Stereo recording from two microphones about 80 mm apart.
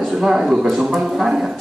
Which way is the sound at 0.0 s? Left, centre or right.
Centre.